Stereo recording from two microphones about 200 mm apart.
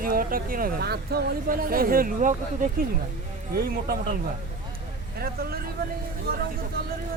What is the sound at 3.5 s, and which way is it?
Speech, 50° right (ahead or behind).